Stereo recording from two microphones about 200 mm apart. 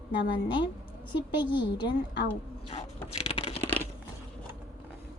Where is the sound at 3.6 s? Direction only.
10° left (ahead or behind).